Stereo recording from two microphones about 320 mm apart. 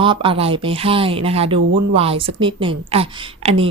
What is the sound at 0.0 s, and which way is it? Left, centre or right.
A woman's voice, centre.